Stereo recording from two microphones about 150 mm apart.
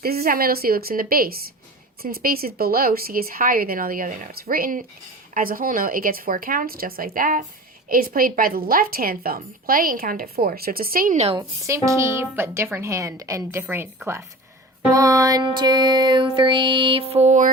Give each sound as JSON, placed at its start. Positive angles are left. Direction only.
{"t": 0.0, "sound": "a woman's voice", "side_deg": -90}
{"t": 11.3, "sound": "speech", "side_deg": -20}
{"t": 14.8, "sound": "music", "side_deg": -20}